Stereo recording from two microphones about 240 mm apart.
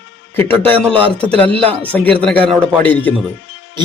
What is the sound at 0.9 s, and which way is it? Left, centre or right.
Speech, right.